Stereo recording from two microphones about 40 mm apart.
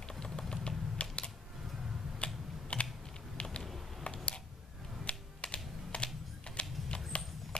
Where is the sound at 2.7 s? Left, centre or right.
Left.